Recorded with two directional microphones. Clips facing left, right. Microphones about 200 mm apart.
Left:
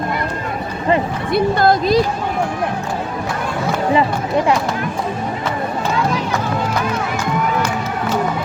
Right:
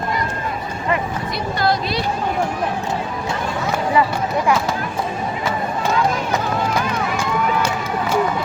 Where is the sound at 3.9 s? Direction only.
25° left (ahead or behind).